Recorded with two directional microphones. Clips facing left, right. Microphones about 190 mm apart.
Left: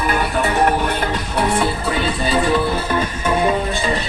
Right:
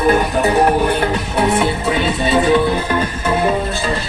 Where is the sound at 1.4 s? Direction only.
25° right (ahead or behind).